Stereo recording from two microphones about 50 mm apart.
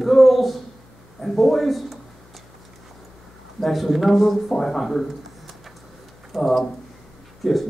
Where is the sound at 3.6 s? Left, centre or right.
Centre.